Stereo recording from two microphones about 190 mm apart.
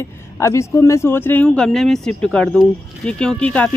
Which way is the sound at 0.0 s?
15° left (ahead or behind).